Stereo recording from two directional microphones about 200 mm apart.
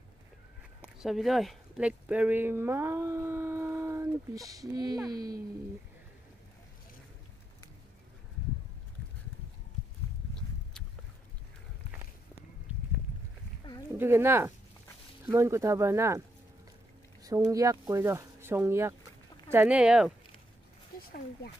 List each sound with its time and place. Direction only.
0.7 s speech: centre (ahead or behind); by 5.4 s 20° right (ahead or behind)
13.9 s speech: 10° right (ahead or behind)
17.2 s speech: 15° right (ahead or behind)